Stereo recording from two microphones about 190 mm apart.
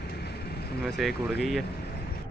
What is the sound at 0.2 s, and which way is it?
Vehicle, 55° left (ahead or behind).